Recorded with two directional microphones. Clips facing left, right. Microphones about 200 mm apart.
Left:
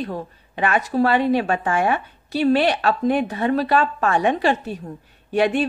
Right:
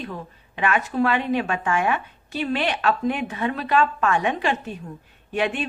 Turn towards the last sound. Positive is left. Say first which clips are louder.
# left 6 dB
turn(degrees=35)  # may be behind; listen again after turning